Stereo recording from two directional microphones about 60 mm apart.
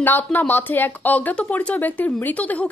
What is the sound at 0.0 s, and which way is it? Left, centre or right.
Speech, left.